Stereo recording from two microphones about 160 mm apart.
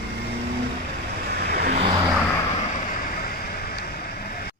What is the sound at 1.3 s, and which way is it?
Vehicle, 80° right.